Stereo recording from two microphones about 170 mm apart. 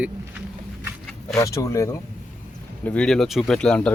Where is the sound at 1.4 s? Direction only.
20° left (ahead or behind).